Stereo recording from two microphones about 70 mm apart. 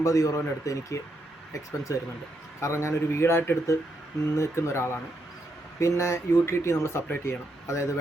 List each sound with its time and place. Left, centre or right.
0.0 s speech: left